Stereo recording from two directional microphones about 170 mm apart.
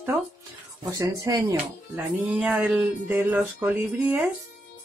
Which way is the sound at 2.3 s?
5° right (ahead or behind).